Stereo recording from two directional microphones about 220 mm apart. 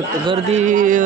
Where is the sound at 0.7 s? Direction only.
35° right (ahead or behind).